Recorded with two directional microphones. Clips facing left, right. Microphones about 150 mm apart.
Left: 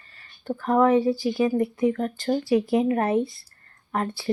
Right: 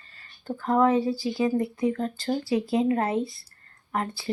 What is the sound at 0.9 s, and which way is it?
Speech, 25° left (ahead or behind).